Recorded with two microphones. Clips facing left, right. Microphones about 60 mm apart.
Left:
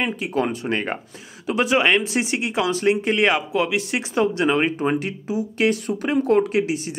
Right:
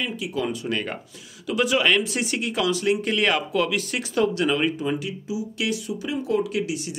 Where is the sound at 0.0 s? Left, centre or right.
Left.